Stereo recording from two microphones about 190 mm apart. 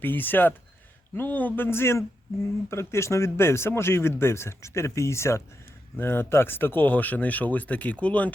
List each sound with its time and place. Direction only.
0.0 s speech: 10° left (ahead or behind)